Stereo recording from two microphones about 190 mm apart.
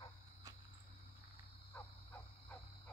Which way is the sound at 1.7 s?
20° left (ahead or behind).